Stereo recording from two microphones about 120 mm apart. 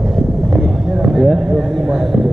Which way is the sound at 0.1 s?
Centre (ahead or behind).